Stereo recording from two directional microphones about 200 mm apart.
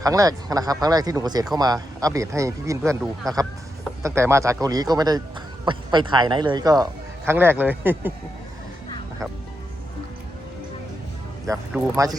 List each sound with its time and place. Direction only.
0.0 s speech: 15° right (ahead or behind)
11.4 s speech: 15° right (ahead or behind)